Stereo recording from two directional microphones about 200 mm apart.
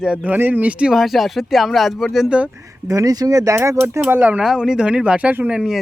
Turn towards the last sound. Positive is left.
turn(degrees=-5)  # may be behind; listen again after turning